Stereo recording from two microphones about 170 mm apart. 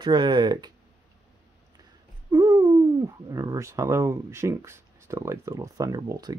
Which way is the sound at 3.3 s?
20° right (ahead or behind).